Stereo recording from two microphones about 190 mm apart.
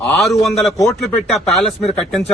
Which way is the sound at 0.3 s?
Centre (ahead or behind).